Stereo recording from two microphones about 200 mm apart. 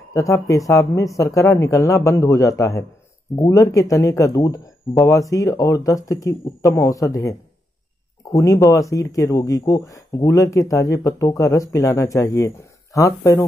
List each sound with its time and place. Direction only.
0.1 s speech: 15° left (ahead or behind)
8.4 s speech: 15° left (ahead or behind)